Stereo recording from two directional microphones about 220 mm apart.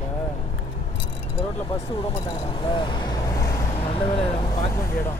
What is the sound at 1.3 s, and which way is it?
Speech, 25° left (ahead or behind).